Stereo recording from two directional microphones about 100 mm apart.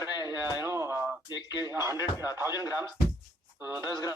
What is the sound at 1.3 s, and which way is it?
Speech, 40° left (ahead or behind).